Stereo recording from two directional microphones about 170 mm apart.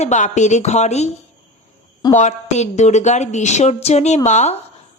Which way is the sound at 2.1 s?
45° left (ahead or behind).